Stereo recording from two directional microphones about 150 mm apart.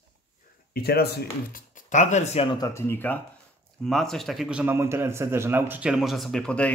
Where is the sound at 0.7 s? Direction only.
90° left; by 2.6 s 40° left (ahead or behind).